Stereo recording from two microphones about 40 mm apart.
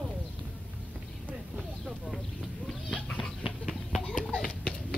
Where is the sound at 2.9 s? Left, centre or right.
Left.